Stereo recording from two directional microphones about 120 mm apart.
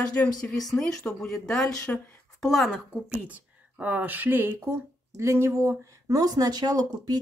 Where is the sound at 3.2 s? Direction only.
10° right (ahead or behind).